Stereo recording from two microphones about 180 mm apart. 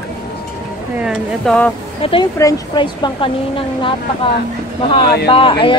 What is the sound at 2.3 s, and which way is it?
A woman's voice, 20° left (ahead or behind).